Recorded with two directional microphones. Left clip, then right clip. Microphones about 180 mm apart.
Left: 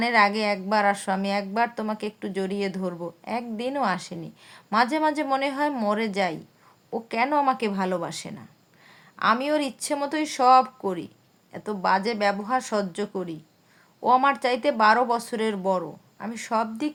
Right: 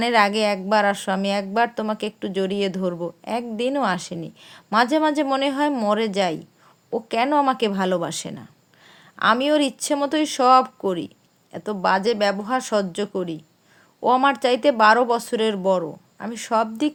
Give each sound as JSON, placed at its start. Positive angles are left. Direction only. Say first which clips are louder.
{"t": 0.0, "sound": "speech", "louder": "right 3 dB", "side_deg": -30}